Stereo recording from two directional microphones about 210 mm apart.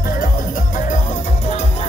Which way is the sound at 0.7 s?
40° left (ahead or behind).